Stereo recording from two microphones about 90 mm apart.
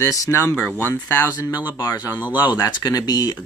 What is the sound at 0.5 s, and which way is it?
Speech, 25° left (ahead or behind).